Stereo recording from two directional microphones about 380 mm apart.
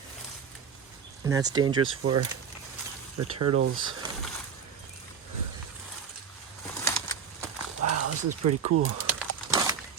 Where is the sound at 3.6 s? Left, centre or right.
Right.